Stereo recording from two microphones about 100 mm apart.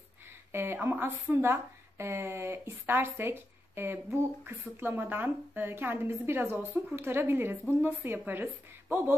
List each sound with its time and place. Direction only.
0.5 s a woman's voice: 25° right (ahead or behind)